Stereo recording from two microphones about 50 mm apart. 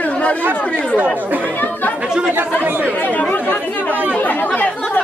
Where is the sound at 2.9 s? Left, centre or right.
Left.